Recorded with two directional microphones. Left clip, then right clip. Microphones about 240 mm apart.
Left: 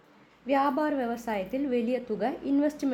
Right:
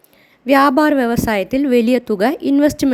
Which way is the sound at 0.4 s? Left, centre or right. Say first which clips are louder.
Right 14 dB; right.